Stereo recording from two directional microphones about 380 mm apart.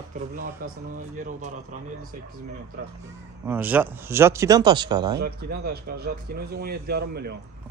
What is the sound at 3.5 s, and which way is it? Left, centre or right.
Speech, centre.